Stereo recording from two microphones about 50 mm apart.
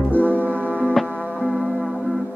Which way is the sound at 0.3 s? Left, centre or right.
Left.